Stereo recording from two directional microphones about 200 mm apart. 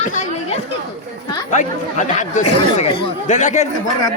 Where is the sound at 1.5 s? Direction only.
40° left (ahead or behind).